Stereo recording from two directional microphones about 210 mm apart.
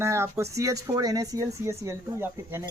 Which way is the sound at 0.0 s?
15° right (ahead or behind).